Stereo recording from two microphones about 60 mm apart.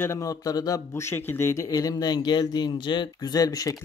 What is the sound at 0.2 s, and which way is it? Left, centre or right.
Speech, left.